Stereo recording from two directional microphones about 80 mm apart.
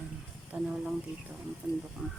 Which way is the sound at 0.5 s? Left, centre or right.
Centre.